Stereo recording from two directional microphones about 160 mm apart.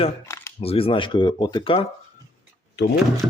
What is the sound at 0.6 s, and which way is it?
Speech, 35° left (ahead or behind).